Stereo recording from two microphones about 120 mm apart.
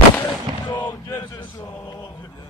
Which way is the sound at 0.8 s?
25° left (ahead or behind).